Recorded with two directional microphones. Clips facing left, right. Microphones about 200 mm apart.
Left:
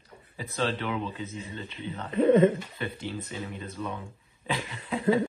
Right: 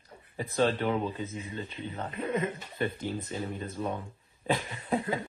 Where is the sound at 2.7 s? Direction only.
45° right (ahead or behind).